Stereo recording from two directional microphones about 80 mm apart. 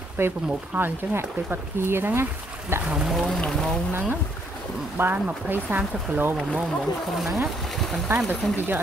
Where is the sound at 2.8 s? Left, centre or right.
Centre.